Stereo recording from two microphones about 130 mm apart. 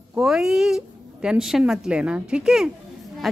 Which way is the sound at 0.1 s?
5° right (ahead or behind).